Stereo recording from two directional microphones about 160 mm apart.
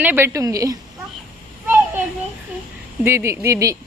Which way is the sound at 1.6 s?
15° right (ahead or behind).